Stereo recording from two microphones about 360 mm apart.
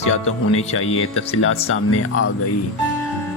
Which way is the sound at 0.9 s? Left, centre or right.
Left.